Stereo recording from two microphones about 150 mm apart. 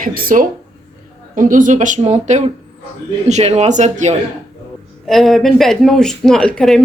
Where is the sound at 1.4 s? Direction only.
60° right (ahead or behind).